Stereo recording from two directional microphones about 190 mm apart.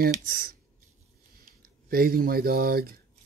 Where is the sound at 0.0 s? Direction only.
50° right (ahead or behind).